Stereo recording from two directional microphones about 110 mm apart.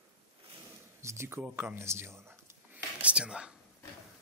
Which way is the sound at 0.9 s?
25° right (ahead or behind).